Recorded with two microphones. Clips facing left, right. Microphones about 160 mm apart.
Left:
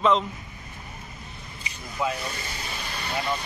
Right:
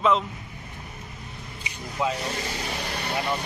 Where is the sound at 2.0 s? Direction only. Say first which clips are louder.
Right 1 dB; 20° right (ahead or behind).